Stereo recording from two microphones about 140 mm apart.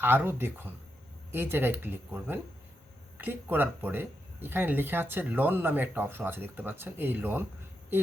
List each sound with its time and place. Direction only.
0.0 s speech: 15° right (ahead or behind)